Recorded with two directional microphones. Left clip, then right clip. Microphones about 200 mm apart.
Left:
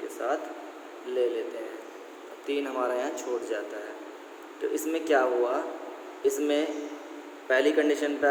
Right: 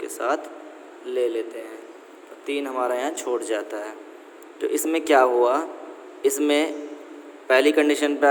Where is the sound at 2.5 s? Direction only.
30° right (ahead or behind).